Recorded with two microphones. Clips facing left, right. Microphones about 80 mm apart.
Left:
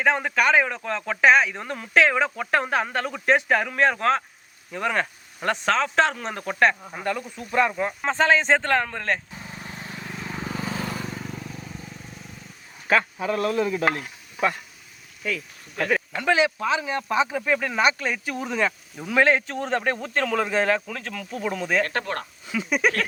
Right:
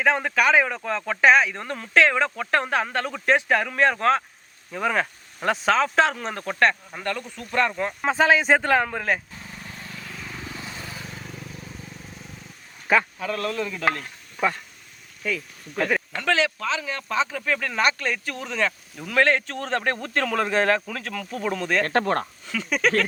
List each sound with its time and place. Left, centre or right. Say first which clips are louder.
0.0 s speech: even; centre
8.0 s a man's voice: right 1 dB; centre
9.3 s vehicle: left 2 dB; centre
9.7 s vehicle: left 5 dB; left
10.5 s vehicle: left 7 dB; left
11.1 s vehicle: left 4 dB; centre
13.1 s stir: left 4 dB; centre
15.2 s speech: right 1 dB; centre
15.8 s a sound: even; centre
16.2 s speech: left 3 dB; centre
21.8 s speech: right 6 dB; right
22.4 s speech: left 2 dB; centre